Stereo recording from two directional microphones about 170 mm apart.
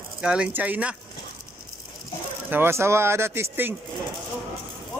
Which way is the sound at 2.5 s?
15° right (ahead or behind).